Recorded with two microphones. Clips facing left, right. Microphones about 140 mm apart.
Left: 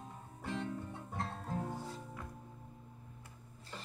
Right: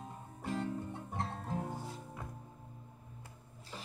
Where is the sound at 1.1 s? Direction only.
20° right (ahead or behind).